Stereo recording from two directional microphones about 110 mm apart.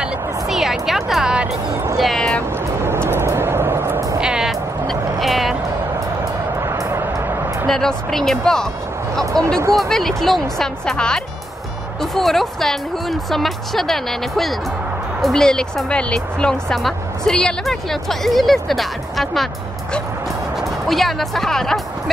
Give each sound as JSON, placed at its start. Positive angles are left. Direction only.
{"t": 0.0, "sound": "music", "side_deg": -5}
{"t": 2.0, "sound": "music", "side_deg": 5}
{"t": 2.8, "sound": "vehicle", "side_deg": -20}
{"t": 4.2, "sound": "music", "side_deg": -5}
{"t": 6.6, "sound": "music", "side_deg": -25}
{"t": 7.6, "sound": "speech", "side_deg": 5}
{"t": 9.2, "sound": "speech", "side_deg": -30}
{"t": 9.8, "sound": "speech", "side_deg": 0}